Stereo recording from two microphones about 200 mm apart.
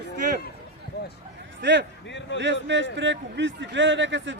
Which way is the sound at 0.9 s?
55° left (ahead or behind).